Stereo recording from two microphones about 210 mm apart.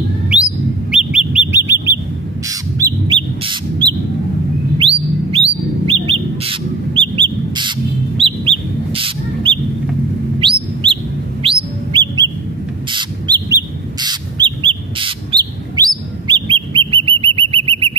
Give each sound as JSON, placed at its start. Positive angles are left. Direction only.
{"t": 0.9, "sound": "bird", "side_deg": -5}
{"t": 10.4, "sound": "chirp", "side_deg": -25}
{"t": 11.4, "sound": "bird", "side_deg": -20}